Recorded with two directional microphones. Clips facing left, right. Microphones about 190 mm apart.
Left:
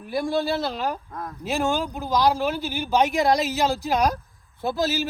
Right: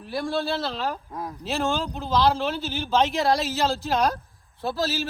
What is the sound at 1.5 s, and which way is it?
Speech, 15° left (ahead or behind).